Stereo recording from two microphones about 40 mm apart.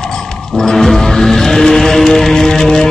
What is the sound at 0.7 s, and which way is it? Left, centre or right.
Music, centre.